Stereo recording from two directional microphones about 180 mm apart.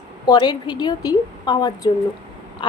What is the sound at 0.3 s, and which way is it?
A woman's voice, 25° left (ahead or behind).